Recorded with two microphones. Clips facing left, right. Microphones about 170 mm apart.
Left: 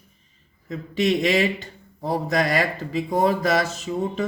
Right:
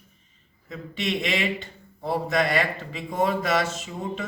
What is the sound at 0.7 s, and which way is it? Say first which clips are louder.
Speech: left 7 dB; 40° left (ahead or behind).